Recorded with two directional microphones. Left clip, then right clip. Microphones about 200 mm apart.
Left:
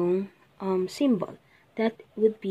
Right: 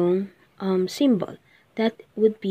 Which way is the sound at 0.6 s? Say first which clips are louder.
Right 4 dB; 15° right (ahead or behind).